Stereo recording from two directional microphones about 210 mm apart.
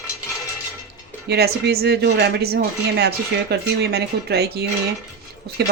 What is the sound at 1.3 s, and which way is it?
Speech, 50° right (ahead or behind).